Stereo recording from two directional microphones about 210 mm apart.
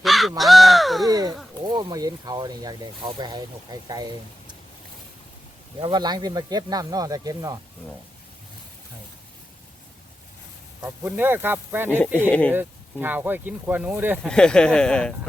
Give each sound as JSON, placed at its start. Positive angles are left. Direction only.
{"t": 0.0, "sound": "crow", "side_deg": 0}
{"t": 1.0, "sound": "a sound", "side_deg": -15}
{"t": 1.6, "sound": "speech", "side_deg": -20}
{"t": 5.8, "sound": "speech", "side_deg": -20}
{"t": 10.8, "sound": "speech", "side_deg": -10}
{"t": 12.3, "sound": "speech", "side_deg": 5}
{"t": 12.5, "sound": "speech", "side_deg": -10}
{"t": 14.3, "sound": "speech", "side_deg": 5}